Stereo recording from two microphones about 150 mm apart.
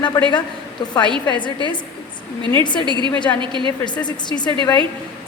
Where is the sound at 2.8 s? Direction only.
30° right (ahead or behind).